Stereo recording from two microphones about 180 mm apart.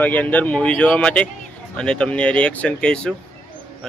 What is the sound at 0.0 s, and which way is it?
Speech, 10° left (ahead or behind).